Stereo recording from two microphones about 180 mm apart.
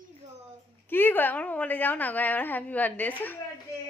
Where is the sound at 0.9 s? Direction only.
10° left (ahead or behind).